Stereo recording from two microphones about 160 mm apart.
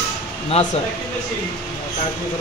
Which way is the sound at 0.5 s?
40° left (ahead or behind).